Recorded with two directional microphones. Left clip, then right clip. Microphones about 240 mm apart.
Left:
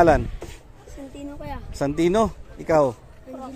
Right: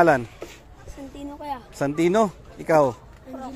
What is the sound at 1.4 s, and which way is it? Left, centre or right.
Speech, centre.